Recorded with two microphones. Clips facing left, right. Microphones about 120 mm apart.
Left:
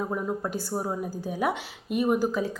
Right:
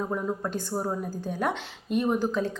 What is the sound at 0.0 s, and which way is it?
A woman's voice, 5° left (ahead or behind).